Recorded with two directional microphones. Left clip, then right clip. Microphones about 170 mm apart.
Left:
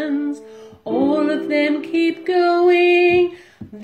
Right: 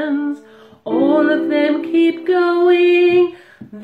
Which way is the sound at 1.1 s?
10° left (ahead or behind).